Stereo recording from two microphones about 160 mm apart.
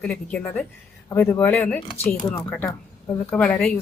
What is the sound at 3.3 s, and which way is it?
Speech, 10° left (ahead or behind).